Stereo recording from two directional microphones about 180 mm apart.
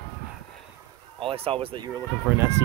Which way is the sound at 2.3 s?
10° right (ahead or behind).